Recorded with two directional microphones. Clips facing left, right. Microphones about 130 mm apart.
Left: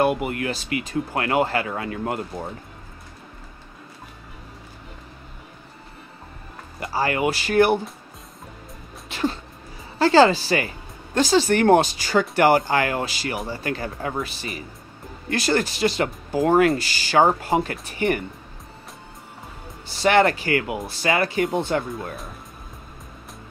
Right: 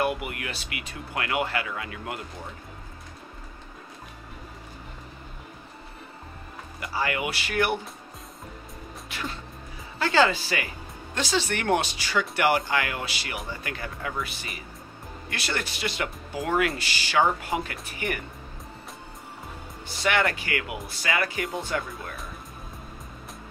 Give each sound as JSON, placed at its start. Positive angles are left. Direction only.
{"t": 0.0, "sound": "speech", "side_deg": 35}
{"t": 6.8, "sound": "speech", "side_deg": 35}
{"t": 9.1, "sound": "a sound", "side_deg": 30}
{"t": 9.9, "sound": "speech", "side_deg": 35}
{"t": 20.0, "sound": "speech", "side_deg": 35}